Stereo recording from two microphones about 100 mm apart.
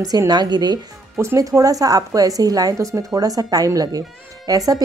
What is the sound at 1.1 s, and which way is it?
Speech, 30° right (ahead or behind).